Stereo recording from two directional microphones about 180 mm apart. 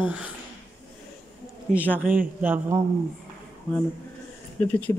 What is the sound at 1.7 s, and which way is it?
A man's voice, 10° right (ahead or behind).